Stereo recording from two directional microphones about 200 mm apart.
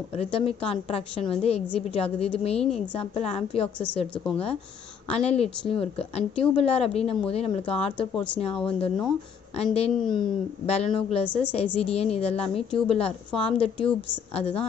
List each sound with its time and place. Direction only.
0.2 s a woman's voice: 30° left (ahead or behind)
2.6 s a woman's voice: centre (ahead or behind)
3.0 s a woman's voice: 30° left (ahead or behind)
3.6 s a woman's voice: 5° left (ahead or behind)
5.1 s a woman's voice: 30° left (ahead or behind)